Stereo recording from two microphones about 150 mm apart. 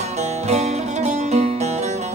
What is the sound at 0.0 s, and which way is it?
Music, 50° right (ahead or behind).